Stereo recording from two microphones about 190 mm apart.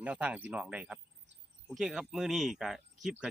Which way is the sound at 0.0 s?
5° right (ahead or behind).